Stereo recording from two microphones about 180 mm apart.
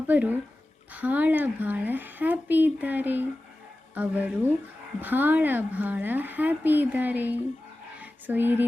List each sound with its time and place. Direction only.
0.1 s speech: 10° right (ahead or behind)